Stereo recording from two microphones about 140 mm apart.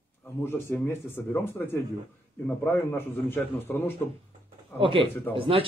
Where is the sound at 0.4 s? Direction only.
15° left (ahead or behind).